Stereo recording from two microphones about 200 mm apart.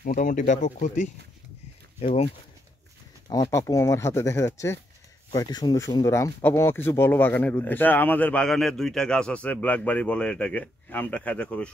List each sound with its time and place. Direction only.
0.0 s speech: 45° left (ahead or behind)
3.3 s speech: 15° left (ahead or behind)